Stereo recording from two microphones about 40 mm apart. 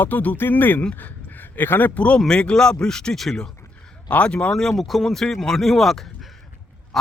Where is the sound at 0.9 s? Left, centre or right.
Left.